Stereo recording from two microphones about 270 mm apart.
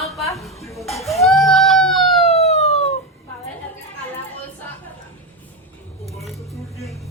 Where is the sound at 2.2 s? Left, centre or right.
Left.